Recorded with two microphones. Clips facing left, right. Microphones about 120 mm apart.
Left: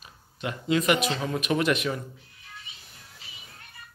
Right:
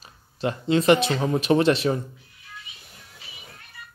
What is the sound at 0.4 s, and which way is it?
Speech, 30° right (ahead or behind).